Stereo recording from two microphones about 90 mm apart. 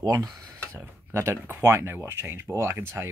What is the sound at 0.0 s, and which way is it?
Speech, 45° right (ahead or behind).